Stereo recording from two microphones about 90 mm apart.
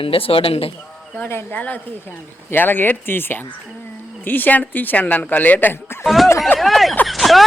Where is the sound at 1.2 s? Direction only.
25° left (ahead or behind).